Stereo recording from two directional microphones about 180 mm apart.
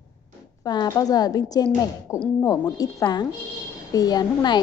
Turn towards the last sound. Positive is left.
turn(degrees=25)  # may be behind; listen again after turning